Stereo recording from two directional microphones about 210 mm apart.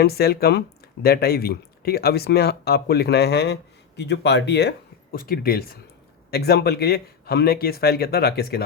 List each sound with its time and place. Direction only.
0.0 s speech: 50° left (ahead or behind)